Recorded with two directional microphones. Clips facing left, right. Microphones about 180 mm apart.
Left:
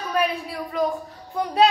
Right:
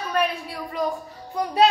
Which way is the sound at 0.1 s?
Centre (ahead or behind).